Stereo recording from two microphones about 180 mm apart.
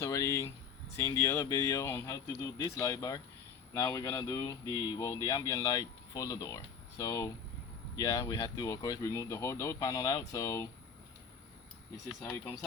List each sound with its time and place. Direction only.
0.0 s speech: 20° left (ahead or behind)